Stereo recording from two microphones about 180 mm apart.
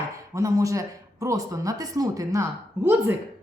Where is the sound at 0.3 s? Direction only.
15° right (ahead or behind).